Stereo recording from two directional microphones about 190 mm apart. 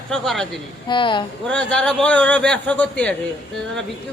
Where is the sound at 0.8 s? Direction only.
25° left (ahead or behind).